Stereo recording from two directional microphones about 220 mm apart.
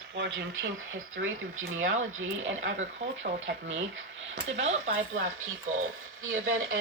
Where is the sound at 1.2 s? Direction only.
65° right (ahead or behind).